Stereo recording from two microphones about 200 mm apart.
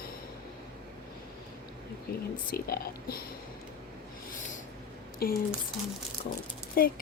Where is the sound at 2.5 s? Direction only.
50° left (ahead or behind).